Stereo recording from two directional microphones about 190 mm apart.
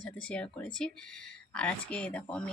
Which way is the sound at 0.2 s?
5° left (ahead or behind).